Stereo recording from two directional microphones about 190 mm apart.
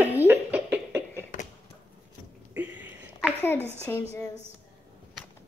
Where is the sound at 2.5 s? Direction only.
10° right (ahead or behind).